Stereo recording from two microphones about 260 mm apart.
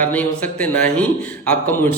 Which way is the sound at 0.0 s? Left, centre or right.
Centre.